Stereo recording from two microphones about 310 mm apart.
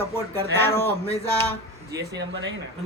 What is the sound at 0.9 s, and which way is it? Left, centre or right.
Speech, centre.